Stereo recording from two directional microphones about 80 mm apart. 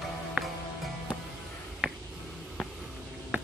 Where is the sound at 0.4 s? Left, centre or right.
Centre.